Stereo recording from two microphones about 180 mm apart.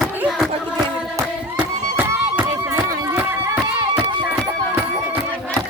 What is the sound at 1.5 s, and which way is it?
Music, 10° right (ahead or behind).